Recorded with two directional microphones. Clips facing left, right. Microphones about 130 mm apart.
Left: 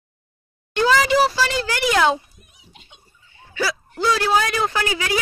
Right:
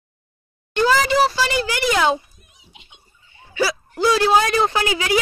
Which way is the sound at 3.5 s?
20° right (ahead or behind).